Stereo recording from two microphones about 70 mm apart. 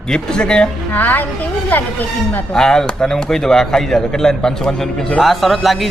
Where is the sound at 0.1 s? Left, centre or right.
Centre.